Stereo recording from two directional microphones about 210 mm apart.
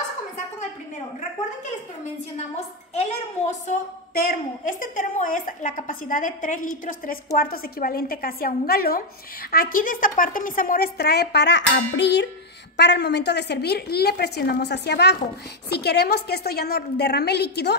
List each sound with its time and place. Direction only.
2.9 s a woman's voice: 30° left (ahead or behind); by 17.7 s 50° left (ahead or behind)